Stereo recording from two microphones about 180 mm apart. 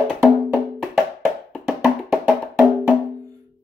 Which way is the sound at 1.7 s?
Centre (ahead or behind).